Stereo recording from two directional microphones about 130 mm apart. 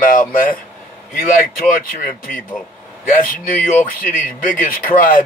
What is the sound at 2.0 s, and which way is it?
Speech, 90° left.